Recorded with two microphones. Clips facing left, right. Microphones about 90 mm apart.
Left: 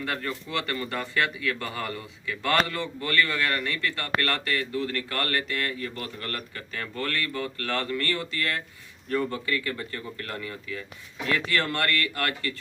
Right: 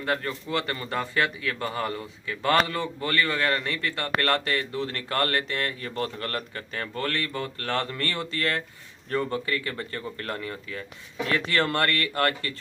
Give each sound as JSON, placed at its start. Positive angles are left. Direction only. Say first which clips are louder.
{"t": 0.0, "sound": "a man's voice", "louder": "right 3 dB", "side_deg": -35}
{"t": 7.7, "sound": "a man's voice", "louder": "even", "side_deg": -30}
{"t": 11.3, "sound": "speech", "louder": "right 3 dB", "side_deg": -30}